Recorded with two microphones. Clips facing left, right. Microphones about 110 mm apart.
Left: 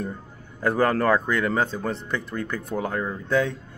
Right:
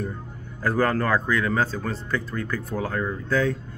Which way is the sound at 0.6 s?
20° left (ahead or behind).